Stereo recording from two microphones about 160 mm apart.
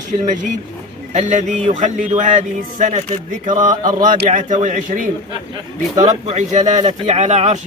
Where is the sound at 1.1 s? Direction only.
50° right (ahead or behind).